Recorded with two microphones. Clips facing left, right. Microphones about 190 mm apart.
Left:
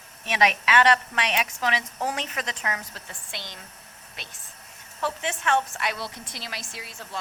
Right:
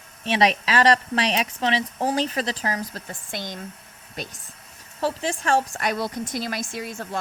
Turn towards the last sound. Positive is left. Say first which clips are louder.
# right 7 dB
turn(degrees=-50)  # may be behind; listen again after turning